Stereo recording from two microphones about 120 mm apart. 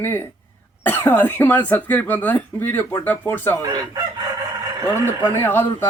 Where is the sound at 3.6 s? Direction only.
35° right (ahead or behind).